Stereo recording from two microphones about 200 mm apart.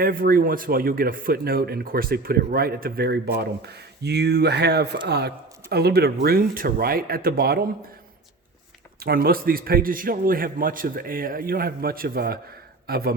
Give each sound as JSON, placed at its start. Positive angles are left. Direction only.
{"t": 0.0, "sound": "speech", "side_deg": -45}
{"t": 9.0, "sound": "speech", "side_deg": -50}